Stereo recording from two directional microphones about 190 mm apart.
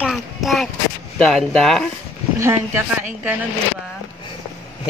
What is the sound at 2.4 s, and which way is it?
Speech, 15° right (ahead or behind).